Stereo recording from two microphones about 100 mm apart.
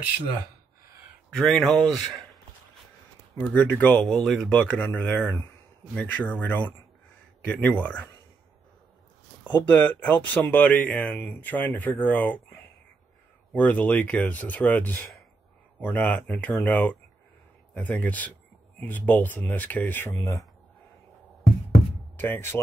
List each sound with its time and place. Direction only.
1.3 s speech: 5° left (ahead or behind)
3.3 s speech: 15° left (ahead or behind)
4.5 s speech: 15° left (ahead or behind)
9.4 s speech: 15° left (ahead or behind)
22.1 s speech: 20° left (ahead or behind)